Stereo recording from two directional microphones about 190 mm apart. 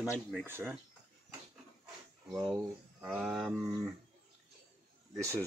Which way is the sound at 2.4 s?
15° right (ahead or behind).